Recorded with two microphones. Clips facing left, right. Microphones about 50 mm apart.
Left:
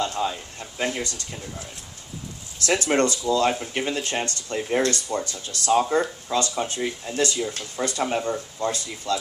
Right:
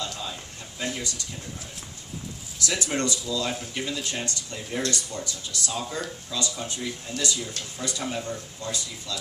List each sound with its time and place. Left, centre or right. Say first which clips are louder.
0.0 s speech: left 8 dB; left
2.6 s speech: left 7 dB; left